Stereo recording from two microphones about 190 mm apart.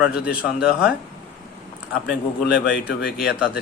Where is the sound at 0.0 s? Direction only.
5° right (ahead or behind).